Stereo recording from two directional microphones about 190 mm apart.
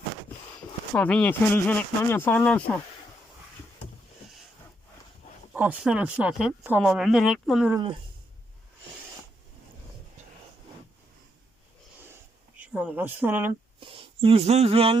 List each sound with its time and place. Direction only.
0.9 s speech: 5° left (ahead or behind)
5.5 s speech: 10° right (ahead or behind)
12.5 s a sound: 5° right (ahead or behind)
13.7 s speech: 30° right (ahead or behind)